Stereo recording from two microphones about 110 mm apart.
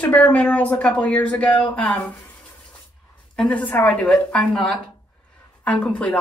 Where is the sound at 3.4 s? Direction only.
10° left (ahead or behind).